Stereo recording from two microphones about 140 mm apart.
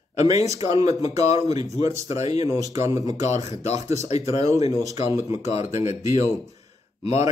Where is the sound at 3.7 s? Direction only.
55° left (ahead or behind).